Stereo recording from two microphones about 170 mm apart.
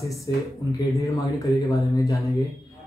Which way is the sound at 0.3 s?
25° left (ahead or behind).